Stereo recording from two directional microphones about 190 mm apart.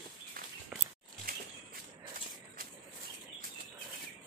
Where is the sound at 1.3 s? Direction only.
50° right (ahead or behind).